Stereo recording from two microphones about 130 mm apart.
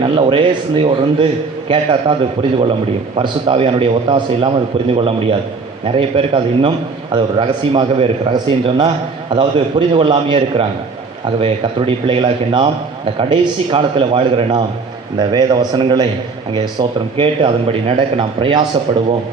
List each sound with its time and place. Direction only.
0.0 s a man's voice: 40° right (ahead or behind)